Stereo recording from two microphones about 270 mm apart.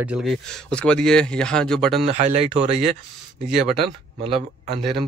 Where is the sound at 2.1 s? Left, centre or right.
Right.